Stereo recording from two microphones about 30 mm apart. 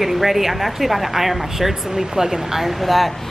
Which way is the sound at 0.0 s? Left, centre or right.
Centre.